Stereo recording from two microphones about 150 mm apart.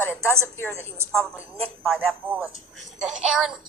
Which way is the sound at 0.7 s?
15° right (ahead or behind).